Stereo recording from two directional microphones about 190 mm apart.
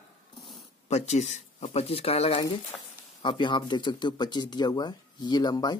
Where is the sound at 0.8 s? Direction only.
35° left (ahead or behind).